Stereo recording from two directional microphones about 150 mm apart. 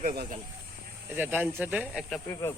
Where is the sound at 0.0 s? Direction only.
70° right (ahead or behind).